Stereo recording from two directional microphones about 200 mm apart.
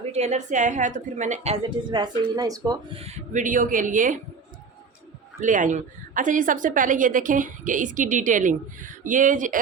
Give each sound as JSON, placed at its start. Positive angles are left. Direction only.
{"t": 0.1, "sound": "a woman's voice", "side_deg": -35}
{"t": 3.0, "sound": "a woman's voice", "side_deg": -35}
{"t": 5.4, "sound": "a woman's voice", "side_deg": -40}